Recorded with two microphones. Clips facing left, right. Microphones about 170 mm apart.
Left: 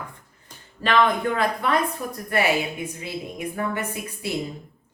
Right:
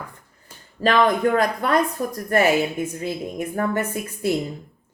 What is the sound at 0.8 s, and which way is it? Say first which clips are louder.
Speech: right 3 dB; 40° right (ahead or behind).